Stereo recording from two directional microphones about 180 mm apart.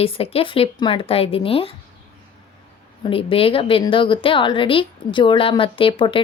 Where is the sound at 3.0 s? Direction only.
30° left (ahead or behind).